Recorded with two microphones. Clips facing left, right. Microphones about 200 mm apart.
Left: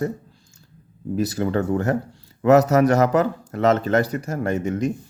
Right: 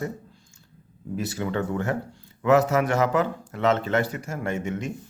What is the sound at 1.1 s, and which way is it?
Speech, 40° left (ahead or behind).